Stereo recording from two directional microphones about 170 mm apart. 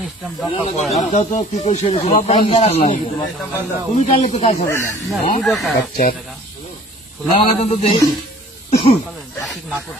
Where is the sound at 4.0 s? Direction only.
45° left (ahead or behind).